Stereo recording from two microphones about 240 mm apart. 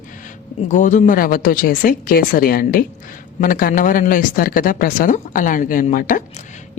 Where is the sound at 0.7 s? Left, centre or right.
Left.